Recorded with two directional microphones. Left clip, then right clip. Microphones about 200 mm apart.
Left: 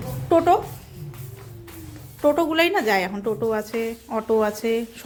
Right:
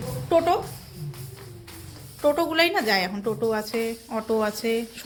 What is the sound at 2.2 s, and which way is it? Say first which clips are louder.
Speech: left 2 dB; 20° left (ahead or behind).